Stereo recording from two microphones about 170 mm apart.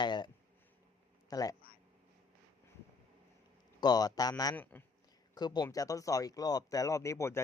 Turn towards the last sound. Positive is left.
turn(degrees=15)  # may be behind; listen again after turning